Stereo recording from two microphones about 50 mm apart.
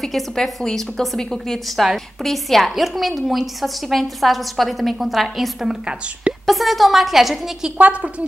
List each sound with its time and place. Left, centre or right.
0.0 s a woman's voice: centre
5.7 s a woman's voice: right
6.4 s a woman's voice: centre
7.7 s a woman's voice: right